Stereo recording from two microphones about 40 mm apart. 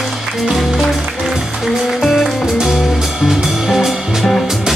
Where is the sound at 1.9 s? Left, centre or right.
Centre.